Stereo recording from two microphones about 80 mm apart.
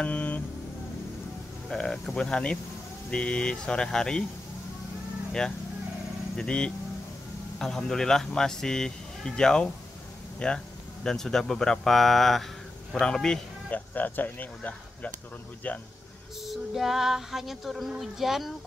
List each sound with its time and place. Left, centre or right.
0.0 s vehicle: centre
1.7 s speech: centre
6.3 s speech: centre
11.1 s child singing: centre
12.9 s speech: centre
13.9 s speech: left
16.4 s child singing: centre